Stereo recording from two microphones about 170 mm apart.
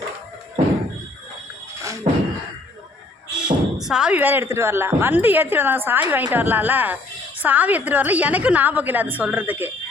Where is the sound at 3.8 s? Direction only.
5° right (ahead or behind).